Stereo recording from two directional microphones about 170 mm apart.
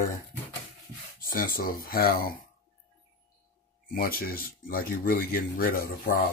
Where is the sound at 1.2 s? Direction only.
55° left (ahead or behind).